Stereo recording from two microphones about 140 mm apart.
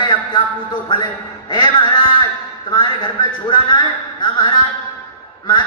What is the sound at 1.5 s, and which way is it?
Speech, 35° left (ahead or behind).